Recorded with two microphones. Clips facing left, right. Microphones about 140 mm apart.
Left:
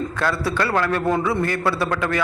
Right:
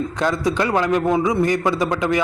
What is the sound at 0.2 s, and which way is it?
A man's voice, 20° right (ahead or behind).